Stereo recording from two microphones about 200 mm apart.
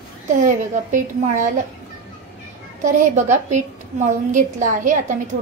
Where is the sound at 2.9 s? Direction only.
40° right (ahead or behind).